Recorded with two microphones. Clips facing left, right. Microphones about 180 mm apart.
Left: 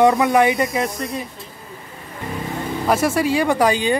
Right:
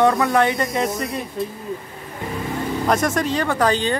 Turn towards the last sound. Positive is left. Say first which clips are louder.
# left 2 dB
turn(degrees=10)  # may be behind; listen again after turning